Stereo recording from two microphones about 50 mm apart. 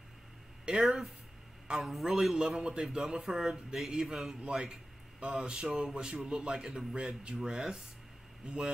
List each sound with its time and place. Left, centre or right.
0.7 s speech: centre
1.8 s a man's voice: centre
2.3 s speech: centre